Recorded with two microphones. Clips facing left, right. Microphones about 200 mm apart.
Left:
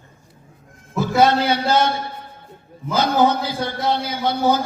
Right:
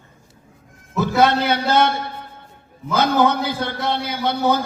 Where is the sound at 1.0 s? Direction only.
55° right (ahead or behind).